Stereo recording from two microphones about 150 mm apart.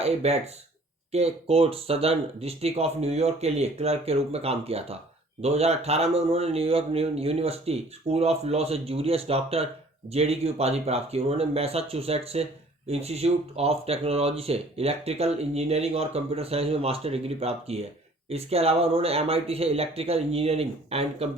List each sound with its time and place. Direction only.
0.0 s speech: 45° right (ahead or behind)